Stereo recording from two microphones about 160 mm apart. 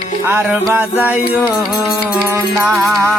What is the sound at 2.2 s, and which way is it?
Music, 15° right (ahead or behind).